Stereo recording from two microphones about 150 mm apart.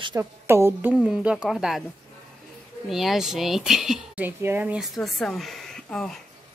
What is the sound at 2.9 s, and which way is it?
Speech, centre (ahead or behind).